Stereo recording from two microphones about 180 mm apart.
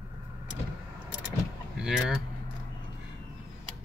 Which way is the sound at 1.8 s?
5° right (ahead or behind).